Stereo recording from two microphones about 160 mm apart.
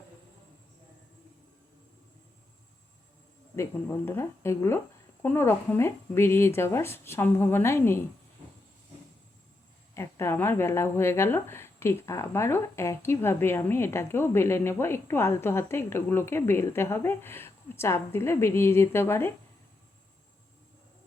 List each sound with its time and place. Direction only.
3.5 s speech: 15° left (ahead or behind)
9.9 s speech: 15° left (ahead or behind)